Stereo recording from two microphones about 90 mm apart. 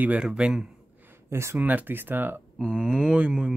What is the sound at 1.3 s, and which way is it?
Speech, 30° right (ahead or behind).